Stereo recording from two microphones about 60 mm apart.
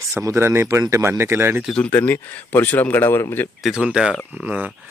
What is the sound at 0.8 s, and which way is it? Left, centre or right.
Speech, right.